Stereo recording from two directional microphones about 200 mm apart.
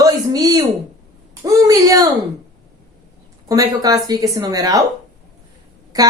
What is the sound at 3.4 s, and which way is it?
Speech, 20° right (ahead or behind).